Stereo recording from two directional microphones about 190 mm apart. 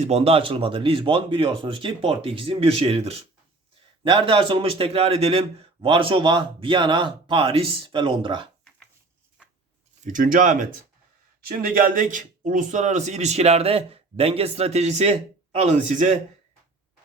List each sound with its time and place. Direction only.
0.0 s a man's voice: 35° right (ahead or behind)
10.0 s speech: 45° right (ahead or behind)